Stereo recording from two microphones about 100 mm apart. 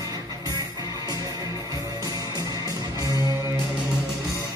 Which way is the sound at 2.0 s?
40° right (ahead or behind).